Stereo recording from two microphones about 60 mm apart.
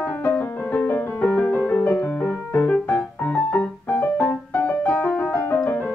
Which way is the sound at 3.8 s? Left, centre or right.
Left.